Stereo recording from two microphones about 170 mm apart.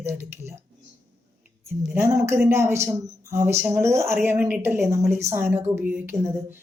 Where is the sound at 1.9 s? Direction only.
15° right (ahead or behind).